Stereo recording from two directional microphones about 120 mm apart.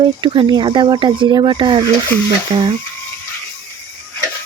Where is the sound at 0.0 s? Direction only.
40° right (ahead or behind).